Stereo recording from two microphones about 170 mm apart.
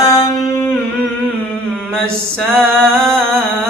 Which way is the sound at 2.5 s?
5° left (ahead or behind).